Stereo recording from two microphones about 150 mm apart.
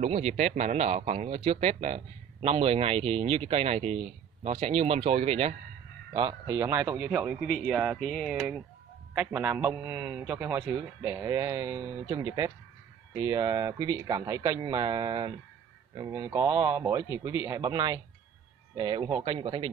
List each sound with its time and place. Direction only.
0.0 s speech: 45° right (ahead or behind)
6.1 s speech: 30° right (ahead or behind)
6.5 s speech: 15° right (ahead or behind)
7.4 s speech: 5° left (ahead or behind)
7.7 s speech: 10° right (ahead or behind); by 19.7 s 30° right (ahead or behind)